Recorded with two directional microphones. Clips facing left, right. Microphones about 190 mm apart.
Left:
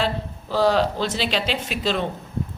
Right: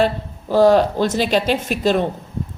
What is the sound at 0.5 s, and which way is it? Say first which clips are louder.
A man's voice: right 6 dB; 50° right (ahead or behind).